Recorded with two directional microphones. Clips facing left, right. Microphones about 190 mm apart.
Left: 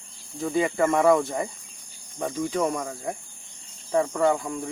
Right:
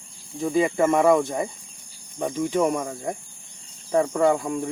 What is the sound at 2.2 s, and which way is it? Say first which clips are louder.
Speech: right 3 dB; 15° right (ahead or behind).